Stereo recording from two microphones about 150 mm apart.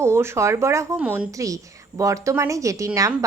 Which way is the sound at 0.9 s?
10° right (ahead or behind).